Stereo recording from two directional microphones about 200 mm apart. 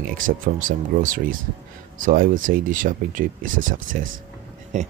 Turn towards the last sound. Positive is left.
turn(degrees=-35)  # may be behind; listen again after turning